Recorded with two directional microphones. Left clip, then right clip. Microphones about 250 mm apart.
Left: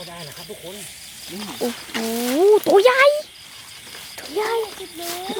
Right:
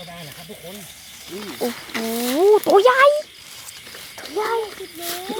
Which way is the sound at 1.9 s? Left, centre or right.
Centre.